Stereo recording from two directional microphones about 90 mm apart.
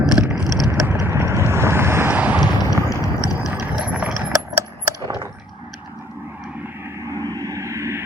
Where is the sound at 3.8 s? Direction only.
15° right (ahead or behind).